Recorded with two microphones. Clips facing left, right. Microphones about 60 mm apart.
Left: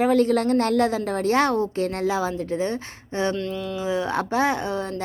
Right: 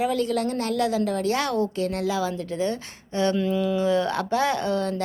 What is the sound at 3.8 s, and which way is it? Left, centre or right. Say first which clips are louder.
Speech: right 2 dB; centre.